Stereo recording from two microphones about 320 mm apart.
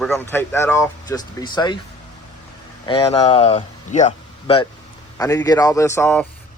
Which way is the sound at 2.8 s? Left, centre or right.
Centre.